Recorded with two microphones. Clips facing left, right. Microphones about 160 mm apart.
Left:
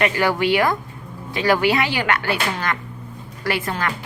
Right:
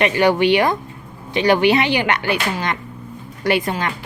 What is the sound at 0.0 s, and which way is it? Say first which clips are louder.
A woman's voice: right 4 dB; 20° right (ahead or behind).